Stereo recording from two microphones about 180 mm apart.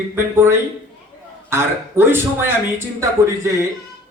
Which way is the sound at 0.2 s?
10° right (ahead or behind).